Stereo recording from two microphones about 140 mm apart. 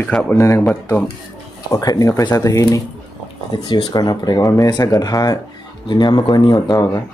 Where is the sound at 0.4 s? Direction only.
20° left (ahead or behind).